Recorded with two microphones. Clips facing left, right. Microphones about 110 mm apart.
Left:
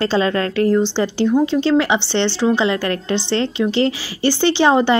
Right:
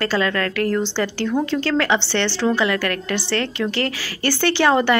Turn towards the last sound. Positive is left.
turn(degrees=20)  # may be behind; listen again after turning